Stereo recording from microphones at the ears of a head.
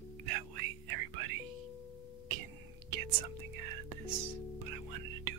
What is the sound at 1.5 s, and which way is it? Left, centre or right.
Doorbell, left.